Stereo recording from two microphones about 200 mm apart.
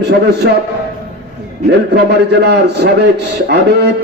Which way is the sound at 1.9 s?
55° right (ahead or behind).